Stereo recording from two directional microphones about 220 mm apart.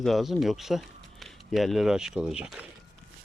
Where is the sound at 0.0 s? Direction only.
Centre (ahead or behind).